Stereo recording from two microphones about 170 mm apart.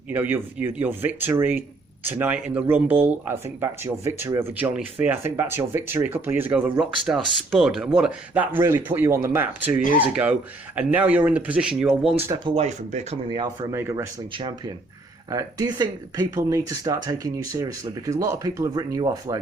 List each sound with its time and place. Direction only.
0.1 s speech: 10° right (ahead or behind)
12.5 s speech: 40° right (ahead or behind)
13.3 s speech: 25° right (ahead or behind)
15.3 s speech: 20° right (ahead or behind)